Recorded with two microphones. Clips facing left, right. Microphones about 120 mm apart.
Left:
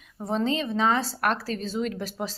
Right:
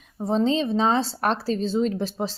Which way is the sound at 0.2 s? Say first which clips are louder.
Right 4 dB; 30° right (ahead or behind).